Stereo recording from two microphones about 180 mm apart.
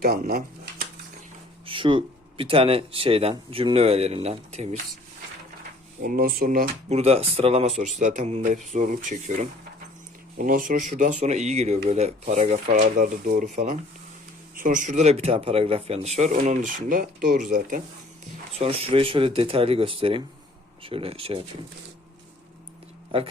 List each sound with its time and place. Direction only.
0.0 s speech: 55° right (ahead or behind)
1.6 s speech: 30° right (ahead or behind)
6.0 s speech: 50° right (ahead or behind)
6.9 s speech: 35° right (ahead or behind)
18.6 s speech: 30° right (ahead or behind)